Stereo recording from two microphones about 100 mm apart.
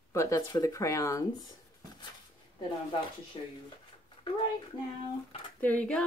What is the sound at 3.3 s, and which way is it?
Speech, 75° left (ahead or behind).